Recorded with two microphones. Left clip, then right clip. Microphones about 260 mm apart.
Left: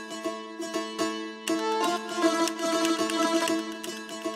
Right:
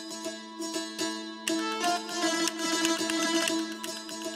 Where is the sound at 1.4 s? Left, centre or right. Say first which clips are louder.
Left 2 dB; centre.